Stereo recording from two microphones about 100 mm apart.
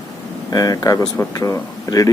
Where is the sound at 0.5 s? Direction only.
40° left (ahead or behind).